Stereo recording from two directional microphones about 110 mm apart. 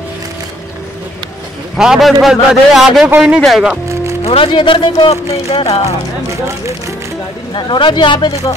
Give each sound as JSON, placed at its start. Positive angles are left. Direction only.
{"t": 1.8, "sound": "a man's voice", "side_deg": 0}
{"t": 3.9, "sound": "music", "side_deg": -25}
{"t": 4.2, "sound": "speech", "side_deg": 55}
{"t": 5.1, "sound": "speech", "side_deg": 70}
{"t": 7.5, "sound": "speech", "side_deg": 45}